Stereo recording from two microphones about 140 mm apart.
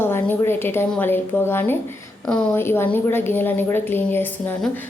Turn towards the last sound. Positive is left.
turn(degrees=15)  # may be behind; listen again after turning